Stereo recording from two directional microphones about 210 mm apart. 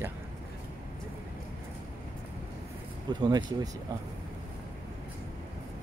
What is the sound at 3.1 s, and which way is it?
Speech, 20° right (ahead or behind).